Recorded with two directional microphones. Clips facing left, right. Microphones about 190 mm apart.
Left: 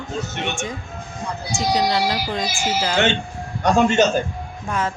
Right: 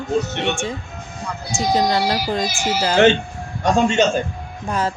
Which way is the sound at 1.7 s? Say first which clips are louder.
Right 2 dB; 45° right (ahead or behind).